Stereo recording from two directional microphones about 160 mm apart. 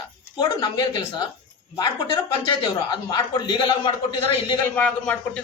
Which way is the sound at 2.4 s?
30° left (ahead or behind).